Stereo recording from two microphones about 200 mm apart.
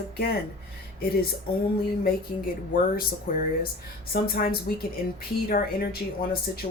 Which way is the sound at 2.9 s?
45° left (ahead or behind).